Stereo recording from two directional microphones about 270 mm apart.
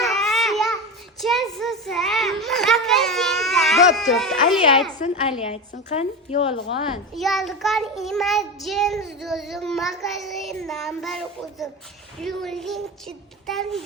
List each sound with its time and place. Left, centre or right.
0.0 s babbling: centre
1.2 s children playing: centre
5.9 s a woman's voice: left
7.2 s child singing: centre